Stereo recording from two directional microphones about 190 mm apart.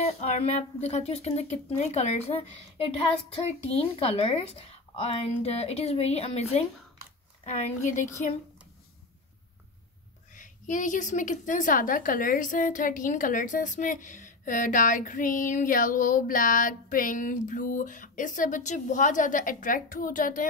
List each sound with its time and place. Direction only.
0.0 s a woman's voice: 35° left (ahead or behind)
10.3 s a woman's voice: 45° left (ahead or behind)